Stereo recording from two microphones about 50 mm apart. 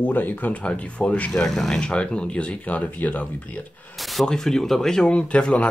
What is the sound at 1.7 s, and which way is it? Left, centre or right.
Speech, centre.